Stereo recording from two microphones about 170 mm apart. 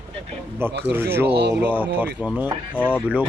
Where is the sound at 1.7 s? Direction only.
10° right (ahead or behind).